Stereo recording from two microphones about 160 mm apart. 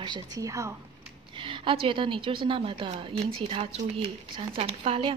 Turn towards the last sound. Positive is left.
turn(degrees=-35)  # may be behind; listen again after turning